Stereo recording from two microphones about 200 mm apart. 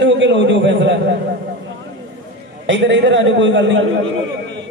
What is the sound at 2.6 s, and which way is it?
A man's voice, 65° right (ahead or behind).